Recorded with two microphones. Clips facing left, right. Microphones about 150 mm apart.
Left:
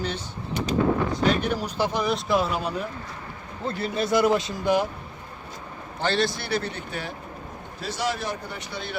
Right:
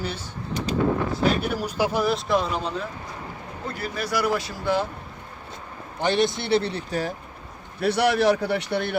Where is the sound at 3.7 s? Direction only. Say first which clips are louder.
Left 4 dB; 25° left (ahead or behind).